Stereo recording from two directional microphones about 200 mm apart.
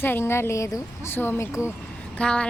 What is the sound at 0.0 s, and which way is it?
Speech, 10° left (ahead or behind).